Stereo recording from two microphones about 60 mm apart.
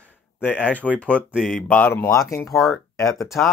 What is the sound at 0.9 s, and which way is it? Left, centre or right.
Speech, centre.